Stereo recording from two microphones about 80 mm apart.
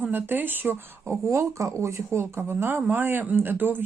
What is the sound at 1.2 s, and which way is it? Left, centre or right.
Speech, right.